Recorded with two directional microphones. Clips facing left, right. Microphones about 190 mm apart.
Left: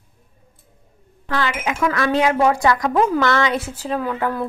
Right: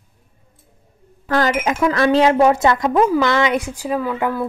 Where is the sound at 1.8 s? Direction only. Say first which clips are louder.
Right 4 dB; 30° right (ahead or behind).